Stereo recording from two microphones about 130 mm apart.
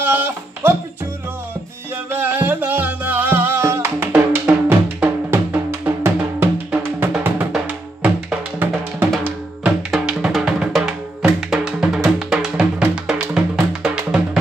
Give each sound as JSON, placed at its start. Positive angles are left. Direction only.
{"t": 0.0, "sound": "a sound", "side_deg": -15}
{"t": 2.0, "sound": "music", "side_deg": -15}
{"t": 4.1, "sound": "drum", "side_deg": -10}
{"t": 7.5, "sound": "music", "side_deg": -5}